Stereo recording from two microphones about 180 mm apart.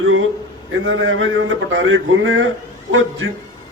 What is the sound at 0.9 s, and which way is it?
A man's voice, 90° right.